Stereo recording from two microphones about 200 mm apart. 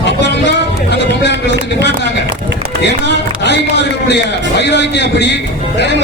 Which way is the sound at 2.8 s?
60° left (ahead or behind).